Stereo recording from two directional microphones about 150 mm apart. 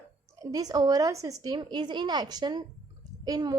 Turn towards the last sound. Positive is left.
turn(degrees=-25)  # may be behind; listen again after turning